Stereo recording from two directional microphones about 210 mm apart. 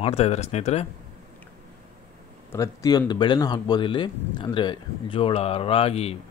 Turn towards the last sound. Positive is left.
turn(degrees=30)  # may be behind; listen again after turning